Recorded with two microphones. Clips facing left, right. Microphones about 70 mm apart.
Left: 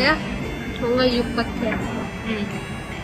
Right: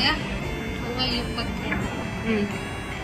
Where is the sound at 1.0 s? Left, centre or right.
Left.